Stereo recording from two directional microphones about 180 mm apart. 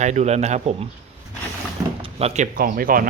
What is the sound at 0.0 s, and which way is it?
Speech, 40° right (ahead or behind).